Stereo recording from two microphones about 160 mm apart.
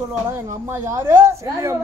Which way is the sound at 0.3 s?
15° right (ahead or behind).